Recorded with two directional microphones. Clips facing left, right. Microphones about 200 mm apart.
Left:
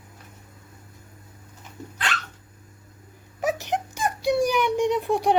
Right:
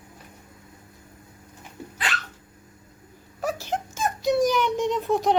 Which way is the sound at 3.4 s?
20° left (ahead or behind).